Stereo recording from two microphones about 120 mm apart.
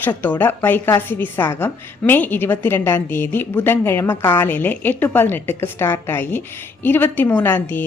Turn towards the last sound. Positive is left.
turn(degrees=15)  # may be behind; listen again after turning